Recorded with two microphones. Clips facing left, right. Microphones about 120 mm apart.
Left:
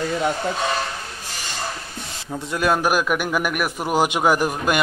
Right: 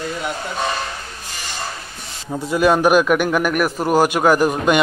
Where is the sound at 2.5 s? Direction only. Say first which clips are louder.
Right 6 dB; centre (ahead or behind).